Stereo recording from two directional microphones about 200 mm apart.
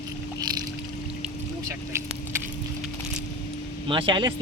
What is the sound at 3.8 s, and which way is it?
Speech, 25° right (ahead or behind).